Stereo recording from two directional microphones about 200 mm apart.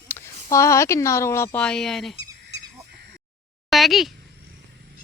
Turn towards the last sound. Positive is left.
turn(degrees=0)  # may be behind; listen again after turning